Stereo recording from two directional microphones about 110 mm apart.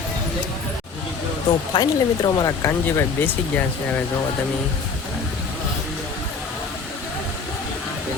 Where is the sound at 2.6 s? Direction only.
25° left (ahead or behind).